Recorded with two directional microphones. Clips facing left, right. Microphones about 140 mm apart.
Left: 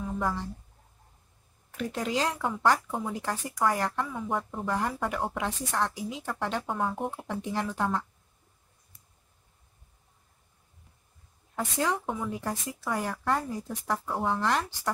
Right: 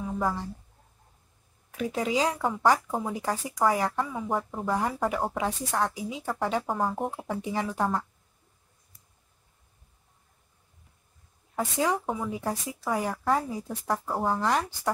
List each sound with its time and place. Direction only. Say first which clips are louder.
0.0 s a sound: right 2 dB; 5° right (ahead or behind)
1.7 s speech: right 3 dB; 5° right (ahead or behind)
11.5 s speech: right 2 dB; 5° right (ahead or behind)